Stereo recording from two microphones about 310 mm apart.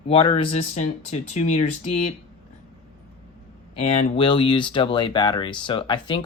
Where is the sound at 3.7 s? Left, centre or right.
Centre.